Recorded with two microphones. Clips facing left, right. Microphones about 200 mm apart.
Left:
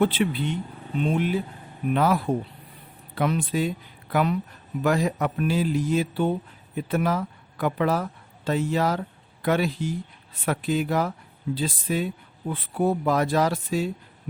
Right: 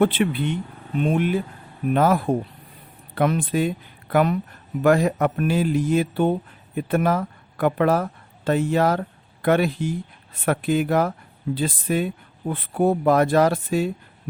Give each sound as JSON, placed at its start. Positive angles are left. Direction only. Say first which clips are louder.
{"t": 0.0, "sound": "speech", "louder": "right 3 dB", "side_deg": -55}